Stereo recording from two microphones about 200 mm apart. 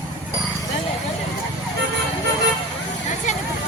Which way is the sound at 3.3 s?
35° left (ahead or behind).